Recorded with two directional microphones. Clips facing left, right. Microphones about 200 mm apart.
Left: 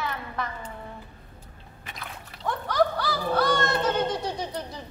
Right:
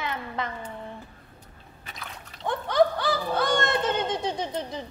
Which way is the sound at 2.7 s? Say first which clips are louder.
Right 3 dB; 20° right (ahead or behind).